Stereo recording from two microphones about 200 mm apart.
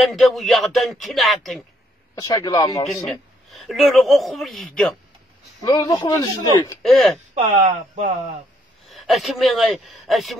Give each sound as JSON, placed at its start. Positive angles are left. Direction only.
{"t": 0.0, "sound": "speech", "side_deg": 0}
{"t": 2.1, "sound": "speech", "side_deg": 20}
{"t": 3.1, "sound": "speech", "side_deg": 0}
{"t": 5.6, "sound": "speech", "side_deg": 20}
{"t": 6.8, "sound": "speech", "side_deg": 0}
{"t": 7.4, "sound": "speech", "side_deg": -35}
{"t": 8.9, "sound": "speech", "side_deg": 0}